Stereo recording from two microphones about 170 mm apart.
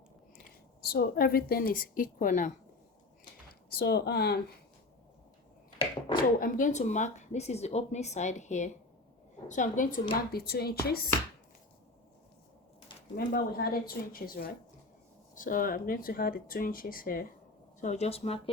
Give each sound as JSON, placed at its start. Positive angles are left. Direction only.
{"t": 0.3, "sound": "a woman's voice", "side_deg": 65}
{"t": 3.7, "sound": "speech", "side_deg": 70}
{"t": 6.4, "sound": "a woman's voice", "side_deg": 50}
{"t": 13.1, "sound": "speech", "side_deg": 65}
{"t": 17.7, "sound": "speech", "side_deg": 45}